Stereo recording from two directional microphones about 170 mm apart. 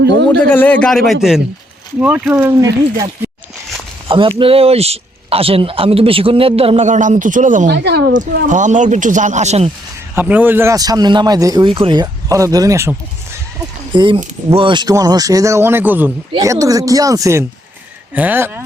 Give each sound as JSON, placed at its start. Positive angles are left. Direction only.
{"t": 0.3, "sound": "a man's voice", "side_deg": 10}
{"t": 4.1, "sound": "speech", "side_deg": -30}
{"t": 7.7, "sound": "a woman's voice", "side_deg": -70}
{"t": 8.4, "sound": "speech", "side_deg": -45}
{"t": 10.2, "sound": "speech", "side_deg": -10}
{"t": 13.9, "sound": "speech", "side_deg": -30}